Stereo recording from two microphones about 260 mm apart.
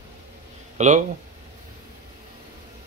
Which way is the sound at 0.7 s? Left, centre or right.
Right.